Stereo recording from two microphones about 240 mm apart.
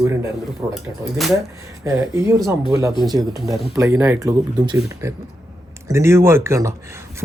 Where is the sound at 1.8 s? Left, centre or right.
Centre.